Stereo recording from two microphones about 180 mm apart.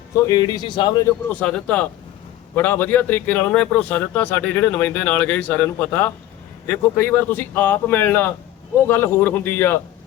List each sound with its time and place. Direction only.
0.2 s speech: 20° left (ahead or behind)
1.3 s speech: 5° left (ahead or behind)